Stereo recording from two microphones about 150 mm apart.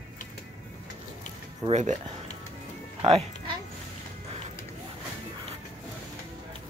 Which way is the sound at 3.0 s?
40° right (ahead or behind).